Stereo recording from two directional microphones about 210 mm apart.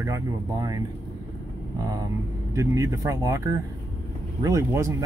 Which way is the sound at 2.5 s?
15° right (ahead or behind).